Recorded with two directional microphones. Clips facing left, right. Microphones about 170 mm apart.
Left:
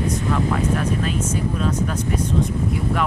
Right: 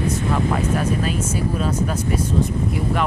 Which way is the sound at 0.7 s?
5° right (ahead or behind).